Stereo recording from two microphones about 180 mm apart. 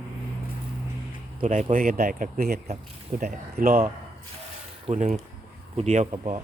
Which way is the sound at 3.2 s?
55° right (ahead or behind).